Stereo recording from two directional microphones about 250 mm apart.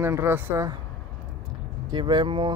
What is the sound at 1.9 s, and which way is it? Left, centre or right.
Speech, centre.